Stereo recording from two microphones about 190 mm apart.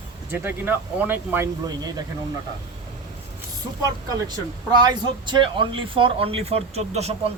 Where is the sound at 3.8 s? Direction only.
20° right (ahead or behind).